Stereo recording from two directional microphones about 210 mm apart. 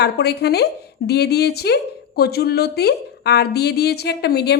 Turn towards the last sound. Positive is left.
turn(degrees=50)  # may be behind; listen again after turning